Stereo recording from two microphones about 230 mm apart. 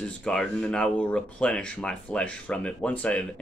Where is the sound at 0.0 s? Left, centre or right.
Centre.